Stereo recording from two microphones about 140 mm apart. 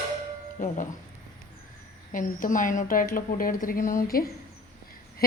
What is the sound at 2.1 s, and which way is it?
A woman's voice, 70° left (ahead or behind).